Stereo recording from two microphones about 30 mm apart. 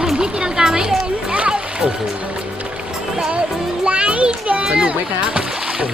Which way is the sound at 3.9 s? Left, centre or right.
Right.